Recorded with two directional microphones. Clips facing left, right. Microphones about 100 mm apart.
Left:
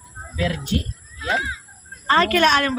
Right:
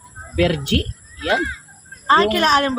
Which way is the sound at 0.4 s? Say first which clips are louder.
Right 6 dB; 80° right.